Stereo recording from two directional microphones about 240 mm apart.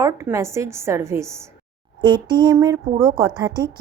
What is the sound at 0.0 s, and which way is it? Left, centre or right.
A woman's voice, centre.